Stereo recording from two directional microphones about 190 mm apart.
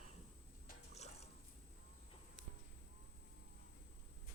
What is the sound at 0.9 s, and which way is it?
Liquid, 35° left (ahead or behind).